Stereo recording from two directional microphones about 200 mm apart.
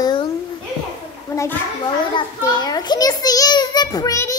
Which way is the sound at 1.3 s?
15° left (ahead or behind).